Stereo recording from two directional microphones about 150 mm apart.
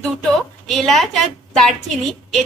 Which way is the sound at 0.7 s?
Centre (ahead or behind).